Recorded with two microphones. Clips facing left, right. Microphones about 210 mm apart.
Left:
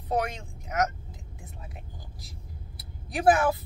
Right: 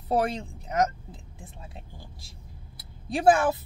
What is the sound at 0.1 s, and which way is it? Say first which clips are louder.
Speech: right 3 dB; 30° right (ahead or behind).